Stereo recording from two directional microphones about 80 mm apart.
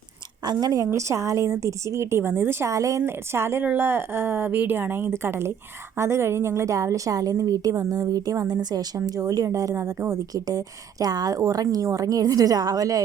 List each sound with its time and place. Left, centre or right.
0.4 s a woman's voice: right
0.9 s a woman's voice: right
3.0 s a woman's voice: right